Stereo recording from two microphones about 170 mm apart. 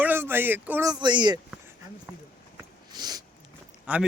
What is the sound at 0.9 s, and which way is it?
Speech, 25° right (ahead or behind).